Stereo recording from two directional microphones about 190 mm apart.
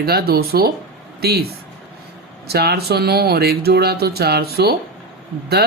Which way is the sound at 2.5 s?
55° right (ahead or behind).